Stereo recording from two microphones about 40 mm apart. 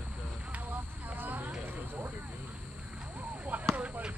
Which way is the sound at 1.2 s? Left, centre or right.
Right.